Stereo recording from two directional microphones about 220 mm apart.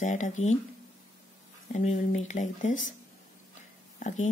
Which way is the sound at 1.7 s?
30° left (ahead or behind).